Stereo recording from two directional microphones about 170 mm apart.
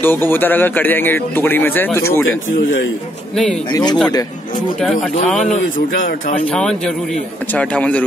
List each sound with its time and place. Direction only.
0.0 s speech: 10° left (ahead or behind)
3.7 s speech: 25° left (ahead or behind)
6.5 s a man's voice: 5° left (ahead or behind)